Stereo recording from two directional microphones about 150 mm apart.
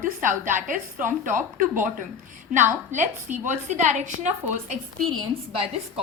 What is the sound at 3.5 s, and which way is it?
A woman's voice, 55° right (ahead or behind).